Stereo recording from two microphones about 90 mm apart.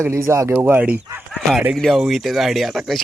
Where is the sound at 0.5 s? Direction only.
20° right (ahead or behind).